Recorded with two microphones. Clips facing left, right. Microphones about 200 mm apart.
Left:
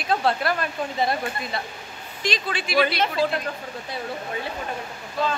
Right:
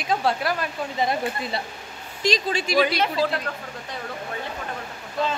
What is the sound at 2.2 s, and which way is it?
Speech, 40° right (ahead or behind).